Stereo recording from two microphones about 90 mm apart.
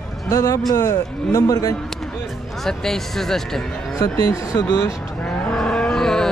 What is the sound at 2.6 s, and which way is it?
Speech, 5° left (ahead or behind).